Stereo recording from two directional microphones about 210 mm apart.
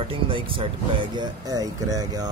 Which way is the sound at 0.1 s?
25° right (ahead or behind).